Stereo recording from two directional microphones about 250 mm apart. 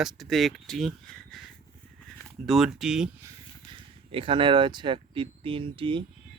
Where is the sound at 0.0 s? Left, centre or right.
Centre; by 6.0 s right.